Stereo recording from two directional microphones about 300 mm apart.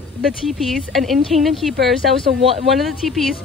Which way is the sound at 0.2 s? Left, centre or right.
Centre.